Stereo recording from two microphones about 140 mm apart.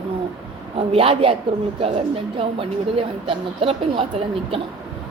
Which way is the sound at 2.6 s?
40° right (ahead or behind).